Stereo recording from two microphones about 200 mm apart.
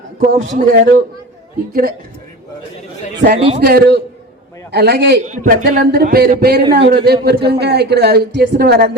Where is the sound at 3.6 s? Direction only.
50° right (ahead or behind).